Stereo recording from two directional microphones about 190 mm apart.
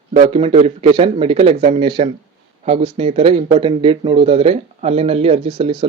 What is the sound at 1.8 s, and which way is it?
Speech, 25° right (ahead or behind).